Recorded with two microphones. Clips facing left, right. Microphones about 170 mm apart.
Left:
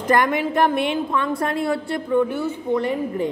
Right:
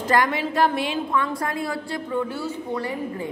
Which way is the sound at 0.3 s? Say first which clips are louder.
Left 3 dB; 20° left (ahead or behind).